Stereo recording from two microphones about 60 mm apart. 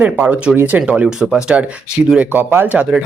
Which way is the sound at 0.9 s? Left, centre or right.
Centre.